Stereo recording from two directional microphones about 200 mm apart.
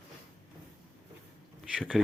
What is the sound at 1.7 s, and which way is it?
Speech, centre (ahead or behind).